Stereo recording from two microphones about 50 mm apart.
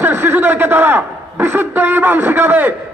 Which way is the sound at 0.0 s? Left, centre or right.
Right.